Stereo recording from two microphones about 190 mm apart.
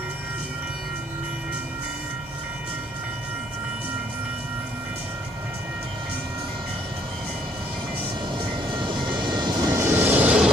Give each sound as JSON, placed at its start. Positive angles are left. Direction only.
{"t": 8.4, "sound": "vehicle", "side_deg": -25}